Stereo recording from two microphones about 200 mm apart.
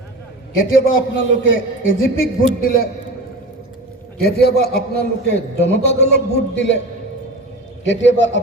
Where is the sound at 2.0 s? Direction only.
45° left (ahead or behind).